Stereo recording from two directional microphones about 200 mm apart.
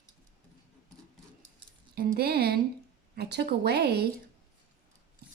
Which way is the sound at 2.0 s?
50° right (ahead or behind).